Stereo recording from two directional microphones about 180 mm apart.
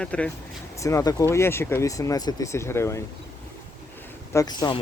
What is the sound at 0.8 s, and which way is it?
Speech, 15° left (ahead or behind).